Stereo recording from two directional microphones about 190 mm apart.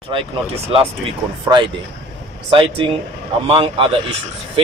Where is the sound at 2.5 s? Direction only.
25° right (ahead or behind).